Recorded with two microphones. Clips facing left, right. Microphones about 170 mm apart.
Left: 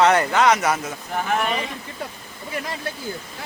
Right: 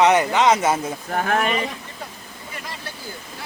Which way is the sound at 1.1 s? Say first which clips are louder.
Right 2 dB; 60° right (ahead or behind).